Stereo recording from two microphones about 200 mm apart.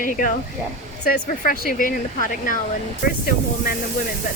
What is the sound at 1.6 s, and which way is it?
Speech, 40° left (ahead or behind).